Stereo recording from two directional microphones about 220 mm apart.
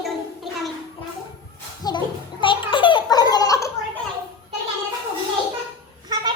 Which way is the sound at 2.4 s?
20° left (ahead or behind).